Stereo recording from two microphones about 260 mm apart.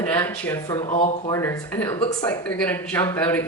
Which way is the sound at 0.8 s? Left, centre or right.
Left.